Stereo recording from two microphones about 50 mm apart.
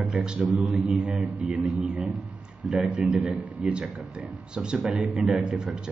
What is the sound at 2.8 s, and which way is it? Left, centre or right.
Speech, centre.